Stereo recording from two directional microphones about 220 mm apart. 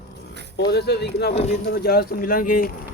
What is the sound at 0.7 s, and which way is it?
Speech, 50° left (ahead or behind).